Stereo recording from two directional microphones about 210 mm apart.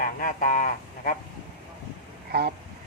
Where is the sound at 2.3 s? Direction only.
50° right (ahead or behind).